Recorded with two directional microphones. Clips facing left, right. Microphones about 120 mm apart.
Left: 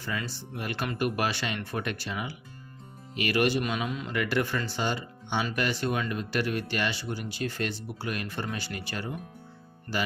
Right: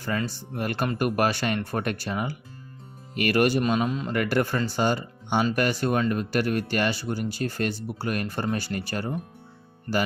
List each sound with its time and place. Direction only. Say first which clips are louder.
0.2 s speech: right 6 dB; 50° right (ahead or behind)
3.7 s a man's voice: right 7 dB; 35° right (ahead or behind)
4.0 s speech: right 4 dB; 45° right (ahead or behind)
9.9 s speech: right 6 dB; 30° right (ahead or behind)